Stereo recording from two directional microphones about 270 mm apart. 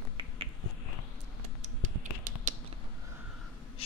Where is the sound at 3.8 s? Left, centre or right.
Left.